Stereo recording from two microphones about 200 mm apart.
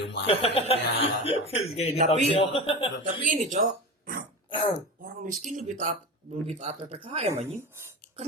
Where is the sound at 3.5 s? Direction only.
45° right (ahead or behind).